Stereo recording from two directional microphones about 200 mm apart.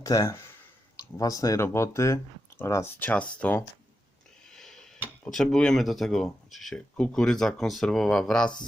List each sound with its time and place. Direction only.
0.0 s speech: 15° left (ahead or behind)
4.5 s tick-tock: centre (ahead or behind)
5.2 s speech: centre (ahead or behind)